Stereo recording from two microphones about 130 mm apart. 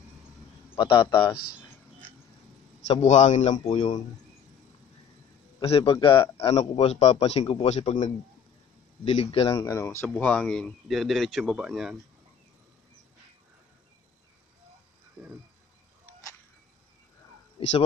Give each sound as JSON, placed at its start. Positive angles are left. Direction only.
{"t": 0.7, "sound": "a man's voice", "side_deg": 35}
{"t": 2.9, "sound": "a man's voice", "side_deg": 60}
{"t": 5.6, "sound": "a man's voice", "side_deg": 45}
{"t": 6.3, "sound": "a man's voice", "side_deg": 50}
{"t": 9.7, "sound": "speech", "side_deg": 20}
{"t": 10.0, "sound": "speech", "side_deg": 10}